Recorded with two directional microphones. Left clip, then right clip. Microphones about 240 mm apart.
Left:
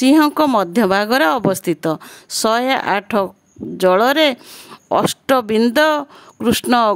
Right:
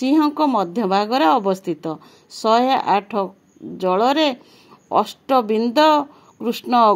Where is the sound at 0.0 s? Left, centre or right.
Left.